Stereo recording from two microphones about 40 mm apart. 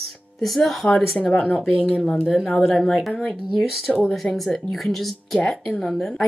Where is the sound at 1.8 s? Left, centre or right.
Right.